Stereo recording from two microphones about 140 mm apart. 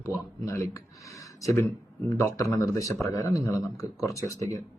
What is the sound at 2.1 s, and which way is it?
A man's voice, 20° left (ahead or behind).